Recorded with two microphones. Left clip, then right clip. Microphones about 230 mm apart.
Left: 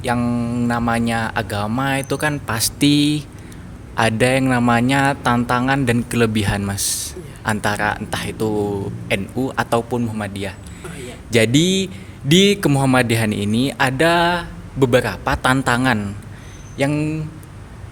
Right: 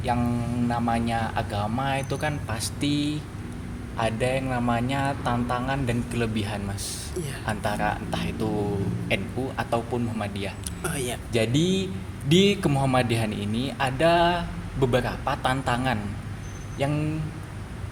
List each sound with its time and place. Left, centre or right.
0.0 s speech: left
10.8 s speech: right
11.3 s speech: left